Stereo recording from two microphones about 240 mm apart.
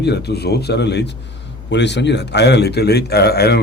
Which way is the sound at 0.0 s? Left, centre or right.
Left.